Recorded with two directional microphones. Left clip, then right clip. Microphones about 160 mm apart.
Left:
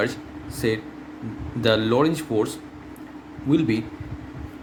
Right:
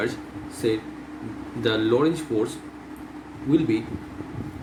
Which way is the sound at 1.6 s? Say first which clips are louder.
Left 2 dB; 70° left (ahead or behind).